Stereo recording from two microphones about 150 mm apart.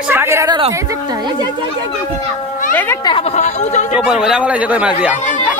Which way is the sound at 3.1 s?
40° left (ahead or behind).